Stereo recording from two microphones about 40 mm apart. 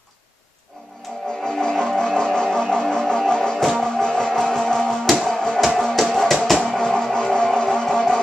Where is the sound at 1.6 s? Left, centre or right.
Centre.